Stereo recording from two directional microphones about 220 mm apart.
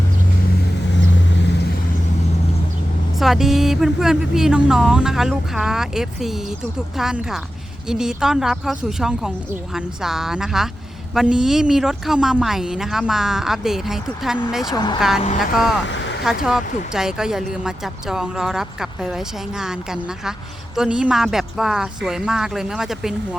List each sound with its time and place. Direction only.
3.2 s speech: centre (ahead or behind)
15.9 s a sound: 55° left (ahead or behind)
16.2 s speech: centre (ahead or behind)